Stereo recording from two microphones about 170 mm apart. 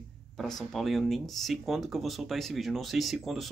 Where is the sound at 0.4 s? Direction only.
Centre (ahead or behind).